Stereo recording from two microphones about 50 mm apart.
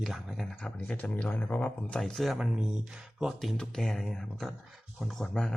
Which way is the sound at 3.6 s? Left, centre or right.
Centre.